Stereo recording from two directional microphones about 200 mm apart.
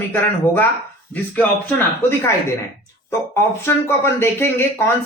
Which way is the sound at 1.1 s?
10° left (ahead or behind).